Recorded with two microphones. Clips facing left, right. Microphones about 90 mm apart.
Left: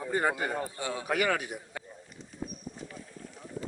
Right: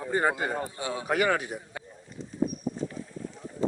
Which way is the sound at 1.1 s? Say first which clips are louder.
Right 4 dB; 35° right (ahead or behind).